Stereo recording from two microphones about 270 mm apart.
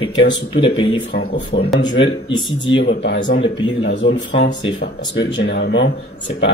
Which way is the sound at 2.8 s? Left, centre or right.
Left.